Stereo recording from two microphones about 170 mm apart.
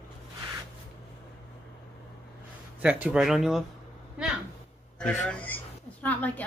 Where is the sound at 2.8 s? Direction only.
5° right (ahead or behind).